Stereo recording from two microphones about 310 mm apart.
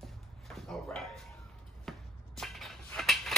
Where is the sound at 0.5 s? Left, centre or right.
Centre.